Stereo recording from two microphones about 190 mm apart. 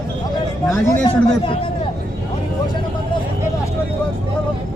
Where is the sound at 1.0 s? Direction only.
25° left (ahead or behind).